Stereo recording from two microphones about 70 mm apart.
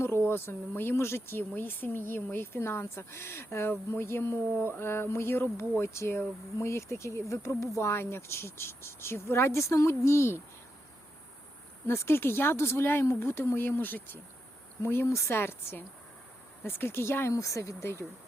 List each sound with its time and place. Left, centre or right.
0.0 s speech: left
11.9 s speech: left
17.3 s speech: left